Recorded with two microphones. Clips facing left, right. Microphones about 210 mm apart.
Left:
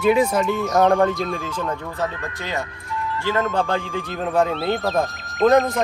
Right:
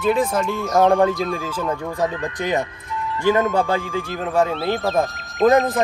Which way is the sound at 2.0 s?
15° right (ahead or behind).